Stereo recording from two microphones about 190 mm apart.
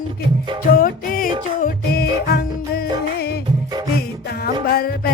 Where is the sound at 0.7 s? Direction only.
50° left (ahead or behind).